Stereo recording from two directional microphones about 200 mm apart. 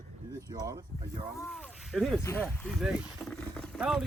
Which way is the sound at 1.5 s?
Centre (ahead or behind).